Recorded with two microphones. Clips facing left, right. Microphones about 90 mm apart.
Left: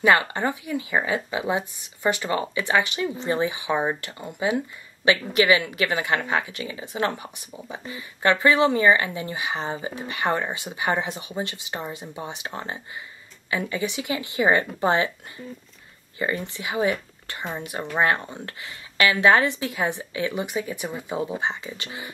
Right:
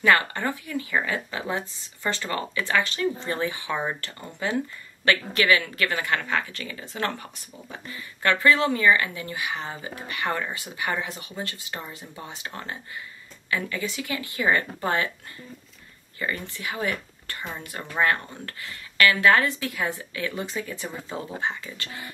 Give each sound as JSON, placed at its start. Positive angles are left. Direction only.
{"t": 0.0, "sound": "a woman's voice", "side_deg": 20}